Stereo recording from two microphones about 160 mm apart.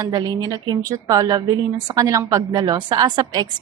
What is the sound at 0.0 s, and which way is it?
A woman's voice, 25° right (ahead or behind).